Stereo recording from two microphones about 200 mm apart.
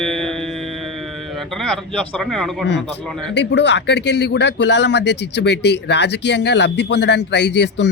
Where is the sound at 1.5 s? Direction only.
5° left (ahead or behind).